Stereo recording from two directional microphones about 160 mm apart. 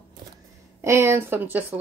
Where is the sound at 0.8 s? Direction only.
15° right (ahead or behind).